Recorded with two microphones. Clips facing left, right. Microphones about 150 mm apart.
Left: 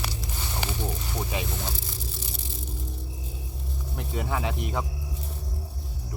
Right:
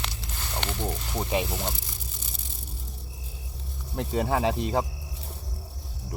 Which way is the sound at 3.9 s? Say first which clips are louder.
Right 5 dB; 30° right (ahead or behind).